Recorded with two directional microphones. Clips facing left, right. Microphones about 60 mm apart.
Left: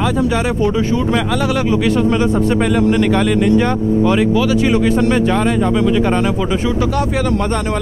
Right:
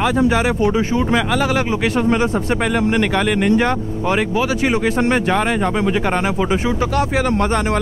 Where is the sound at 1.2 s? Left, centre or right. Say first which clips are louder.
Left 1 dB; centre.